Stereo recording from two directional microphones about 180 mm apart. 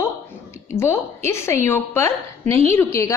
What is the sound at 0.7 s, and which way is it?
A woman's voice, 15° left (ahead or behind).